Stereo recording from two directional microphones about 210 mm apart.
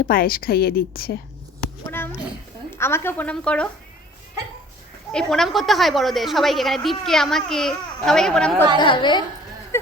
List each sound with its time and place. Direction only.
0.0 s a woman's voice: 45° left (ahead or behind)
2.6 s a woman's voice: 10° left (ahead or behind)
5.1 s a woman's voice: centre (ahead or behind)
8.8 s a woman's voice: 20° left (ahead or behind)